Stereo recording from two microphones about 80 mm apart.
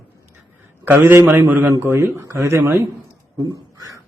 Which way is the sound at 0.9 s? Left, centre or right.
Right.